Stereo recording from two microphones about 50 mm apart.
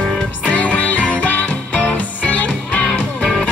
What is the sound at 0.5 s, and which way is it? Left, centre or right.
Music, left.